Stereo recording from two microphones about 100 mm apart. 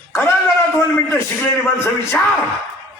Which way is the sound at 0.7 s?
25° left (ahead or behind).